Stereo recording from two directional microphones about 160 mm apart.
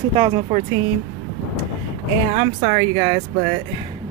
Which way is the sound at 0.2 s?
40° right (ahead or behind).